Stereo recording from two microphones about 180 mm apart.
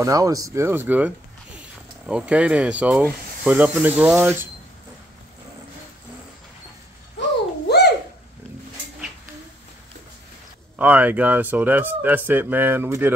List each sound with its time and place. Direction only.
0.0 s speech: 20° right (ahead or behind)
7.6 s a sound: 65° left (ahead or behind)
10.8 s speech: 10° right (ahead or behind)